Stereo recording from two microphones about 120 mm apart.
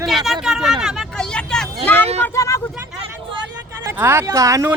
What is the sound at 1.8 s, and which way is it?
Speech, 15° left (ahead or behind).